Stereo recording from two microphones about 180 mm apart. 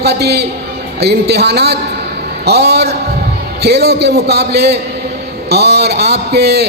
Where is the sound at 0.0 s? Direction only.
65° right (ahead or behind).